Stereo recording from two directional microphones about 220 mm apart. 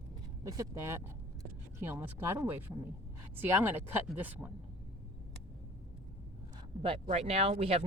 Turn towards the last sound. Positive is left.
turn(degrees=-25)  # may be behind; listen again after turning